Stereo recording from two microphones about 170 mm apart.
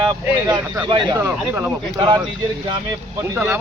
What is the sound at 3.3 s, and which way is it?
Speech, 15° right (ahead or behind).